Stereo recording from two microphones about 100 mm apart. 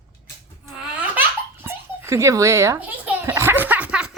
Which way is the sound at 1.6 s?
25° right (ahead or behind).